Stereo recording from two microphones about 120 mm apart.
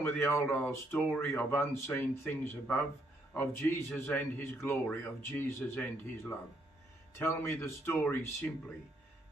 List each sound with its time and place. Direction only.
0.2 s speech: 20° left (ahead or behind)